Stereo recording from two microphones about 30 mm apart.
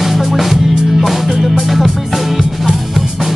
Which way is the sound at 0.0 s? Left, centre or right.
Centre.